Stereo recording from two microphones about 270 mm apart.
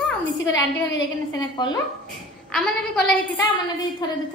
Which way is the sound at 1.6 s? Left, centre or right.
Centre.